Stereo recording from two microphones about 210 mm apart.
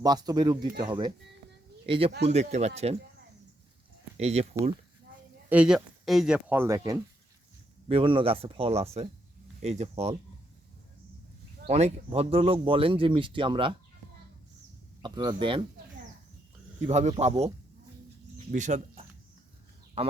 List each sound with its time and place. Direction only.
0.0 s speech: 20° right (ahead or behind)
4.2 s speech: 30° right (ahead or behind)
5.5 s speech: 5° right (ahead or behind); by 10.2 s 30° right (ahead or behind)
11.6 s speech: 30° right (ahead or behind)
15.0 s speech: 20° right (ahead or behind)
16.8 s speech: 35° right (ahead or behind)
18.3 s bird: 35° right (ahead or behind)